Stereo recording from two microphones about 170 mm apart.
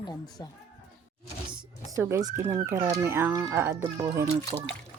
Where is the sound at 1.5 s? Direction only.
20° right (ahead or behind).